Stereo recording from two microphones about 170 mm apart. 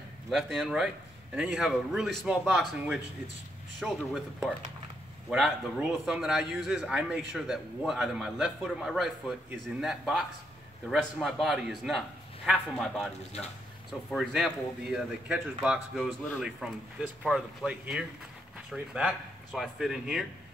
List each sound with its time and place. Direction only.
0.3 s speech: centre (ahead or behind)
14.1 s speech: centre (ahead or behind)